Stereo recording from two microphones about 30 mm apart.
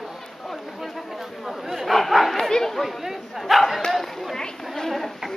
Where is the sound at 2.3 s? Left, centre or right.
Centre.